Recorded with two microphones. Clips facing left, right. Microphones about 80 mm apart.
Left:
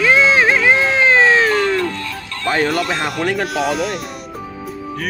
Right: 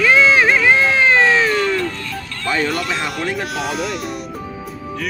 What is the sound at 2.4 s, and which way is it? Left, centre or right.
Speech, left.